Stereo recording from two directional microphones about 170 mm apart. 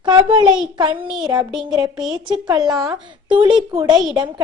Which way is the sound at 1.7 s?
20° right (ahead or behind).